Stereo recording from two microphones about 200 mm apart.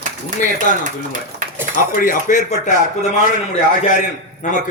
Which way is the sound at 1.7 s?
40° left (ahead or behind).